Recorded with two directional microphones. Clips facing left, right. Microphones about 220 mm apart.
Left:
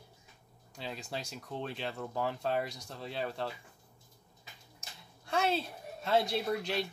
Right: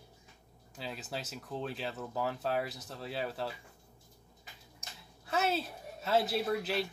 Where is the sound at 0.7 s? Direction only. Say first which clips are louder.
Even; 5° right (ahead or behind).